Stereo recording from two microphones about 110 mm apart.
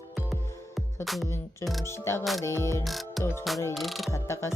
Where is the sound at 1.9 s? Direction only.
25° left (ahead or behind).